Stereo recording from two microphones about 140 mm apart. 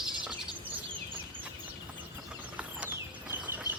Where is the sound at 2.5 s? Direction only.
10° right (ahead or behind).